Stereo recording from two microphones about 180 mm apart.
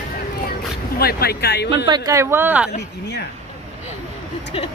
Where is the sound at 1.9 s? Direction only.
20° right (ahead or behind).